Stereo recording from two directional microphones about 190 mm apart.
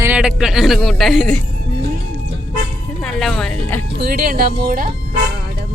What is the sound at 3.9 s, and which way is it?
Speech, 55° right (ahead or behind).